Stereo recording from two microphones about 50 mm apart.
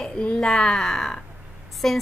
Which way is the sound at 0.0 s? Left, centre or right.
Centre.